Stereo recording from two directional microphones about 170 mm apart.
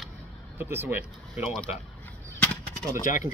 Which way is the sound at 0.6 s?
15° right (ahead or behind).